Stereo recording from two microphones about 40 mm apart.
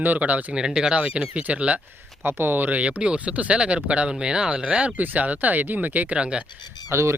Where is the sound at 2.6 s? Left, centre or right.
Right.